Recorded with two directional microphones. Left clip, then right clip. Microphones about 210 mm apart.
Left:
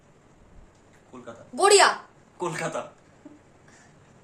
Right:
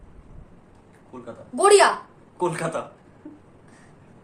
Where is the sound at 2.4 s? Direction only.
15° right (ahead or behind).